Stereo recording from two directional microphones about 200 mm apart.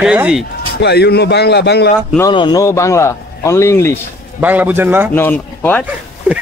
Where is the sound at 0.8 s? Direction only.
55° left (ahead or behind).